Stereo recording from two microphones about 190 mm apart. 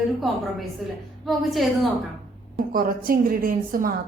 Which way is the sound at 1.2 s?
Centre (ahead or behind).